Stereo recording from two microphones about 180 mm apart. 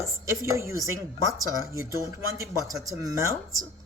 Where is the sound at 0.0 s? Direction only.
15° right (ahead or behind).